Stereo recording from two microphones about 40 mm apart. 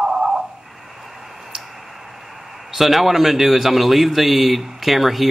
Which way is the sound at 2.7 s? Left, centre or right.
Centre.